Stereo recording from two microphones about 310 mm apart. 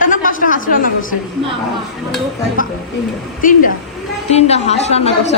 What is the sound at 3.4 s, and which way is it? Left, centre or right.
A woman's voice, left.